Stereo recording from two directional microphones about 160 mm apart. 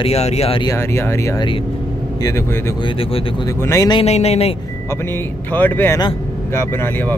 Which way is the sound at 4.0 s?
40° left (ahead or behind).